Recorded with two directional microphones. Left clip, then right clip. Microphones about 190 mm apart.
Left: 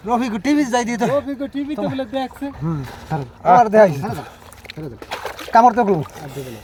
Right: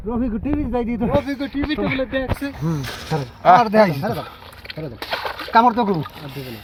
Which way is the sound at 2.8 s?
50° left (ahead or behind).